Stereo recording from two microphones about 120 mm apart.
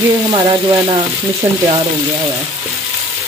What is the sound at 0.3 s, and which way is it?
Frying, 35° right (ahead or behind).